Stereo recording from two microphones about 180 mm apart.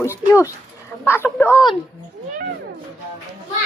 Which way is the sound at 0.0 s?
15° left (ahead or behind).